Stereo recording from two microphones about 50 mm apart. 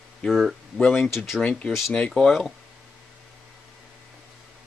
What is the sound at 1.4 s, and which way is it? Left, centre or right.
Speech, left.